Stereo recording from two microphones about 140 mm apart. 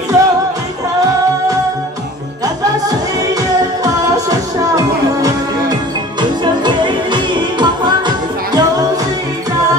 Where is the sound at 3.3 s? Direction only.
25° right (ahead or behind).